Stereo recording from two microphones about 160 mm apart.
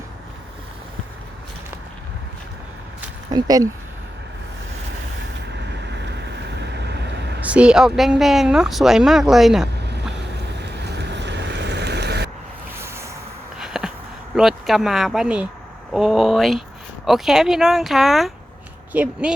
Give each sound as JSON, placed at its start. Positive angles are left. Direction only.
{"t": 3.3, "sound": "speech", "side_deg": -25}
{"t": 5.5, "sound": "vehicle", "side_deg": -90}
{"t": 7.4, "sound": "speech", "side_deg": -5}
{"t": 10.6, "sound": "boat", "side_deg": -90}
{"t": 12.7, "sound": "a sound", "side_deg": -15}
{"t": 13.6, "sound": "a sound", "side_deg": -5}
{"t": 14.3, "sound": "speech", "side_deg": 0}